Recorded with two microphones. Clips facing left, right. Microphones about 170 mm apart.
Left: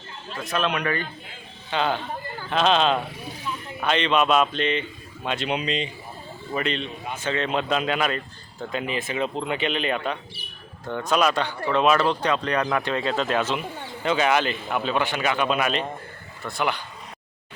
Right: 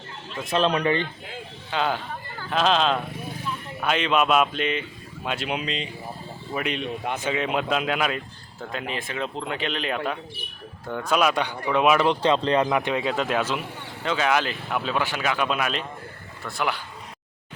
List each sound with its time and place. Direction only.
0.3 s speech: 30° right (ahead or behind)
1.7 s speech: 5° right (ahead or behind)
6.8 s speech: 65° right (ahead or behind)
7.3 s speech: 10° right (ahead or behind)
12.2 s speech: 25° right (ahead or behind); by 13.6 s 10° right (ahead or behind)
14.0 s speech: 5° left (ahead or behind)